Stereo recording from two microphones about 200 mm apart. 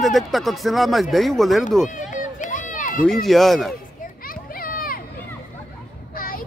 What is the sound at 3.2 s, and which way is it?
Speech, centre (ahead or behind).